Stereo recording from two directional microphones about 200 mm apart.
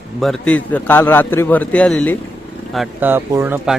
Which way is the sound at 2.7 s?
5° right (ahead or behind).